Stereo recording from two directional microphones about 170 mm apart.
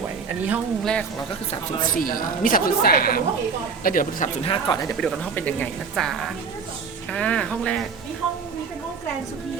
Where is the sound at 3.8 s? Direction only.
50° left (ahead or behind).